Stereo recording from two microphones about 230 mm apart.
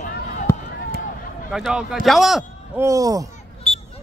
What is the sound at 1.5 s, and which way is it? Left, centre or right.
A man's voice, centre.